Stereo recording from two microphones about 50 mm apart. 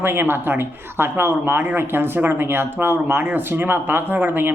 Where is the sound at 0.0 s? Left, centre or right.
Right.